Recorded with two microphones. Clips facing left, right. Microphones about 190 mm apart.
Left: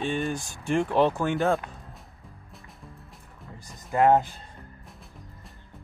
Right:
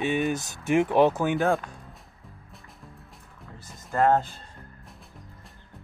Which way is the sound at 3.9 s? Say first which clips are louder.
Left 2 dB; 15° left (ahead or behind).